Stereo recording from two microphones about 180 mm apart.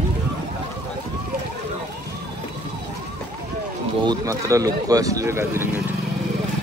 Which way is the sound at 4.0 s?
20° right (ahead or behind).